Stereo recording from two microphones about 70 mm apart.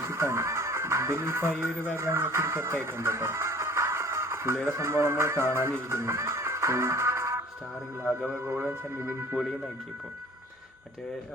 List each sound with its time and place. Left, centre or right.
0.0 s speech: right
8.4 s speech: right